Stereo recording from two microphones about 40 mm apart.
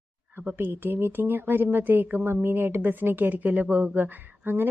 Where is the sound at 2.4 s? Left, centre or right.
Right.